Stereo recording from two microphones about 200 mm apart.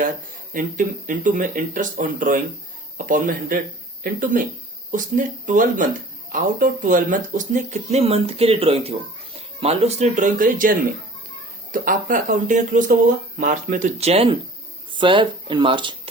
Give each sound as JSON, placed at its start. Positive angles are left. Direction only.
{"t": 0.5, "sound": "speech", "side_deg": -40}